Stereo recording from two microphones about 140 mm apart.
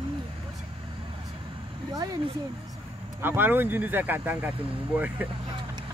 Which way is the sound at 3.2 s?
15° right (ahead or behind).